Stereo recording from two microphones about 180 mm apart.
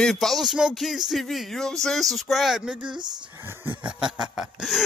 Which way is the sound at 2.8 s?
25° right (ahead or behind).